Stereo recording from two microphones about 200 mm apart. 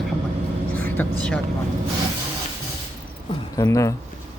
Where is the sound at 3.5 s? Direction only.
15° left (ahead or behind).